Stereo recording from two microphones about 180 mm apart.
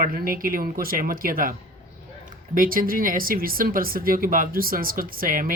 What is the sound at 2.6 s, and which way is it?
Speech, 50° right (ahead or behind).